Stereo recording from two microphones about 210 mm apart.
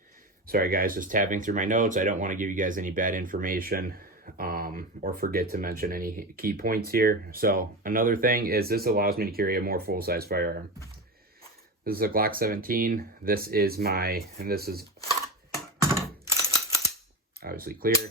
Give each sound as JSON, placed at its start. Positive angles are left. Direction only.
{"t": 0.4, "sound": "speech", "side_deg": -45}
{"t": 11.9, "sound": "speech", "side_deg": -45}
{"t": 15.9, "sound": "a sound", "side_deg": -15}
{"t": 17.4, "sound": "cap gun", "side_deg": -45}